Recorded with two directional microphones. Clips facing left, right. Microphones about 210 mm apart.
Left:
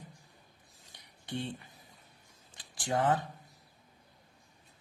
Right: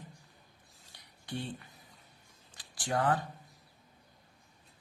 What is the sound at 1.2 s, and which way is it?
Speech, 20° left (ahead or behind).